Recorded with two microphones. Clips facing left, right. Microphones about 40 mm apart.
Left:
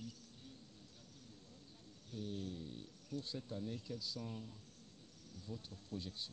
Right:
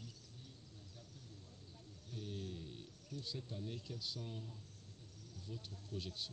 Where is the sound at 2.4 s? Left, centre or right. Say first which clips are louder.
Left 2 dB; right.